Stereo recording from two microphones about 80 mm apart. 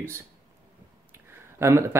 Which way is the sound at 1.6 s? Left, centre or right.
Right.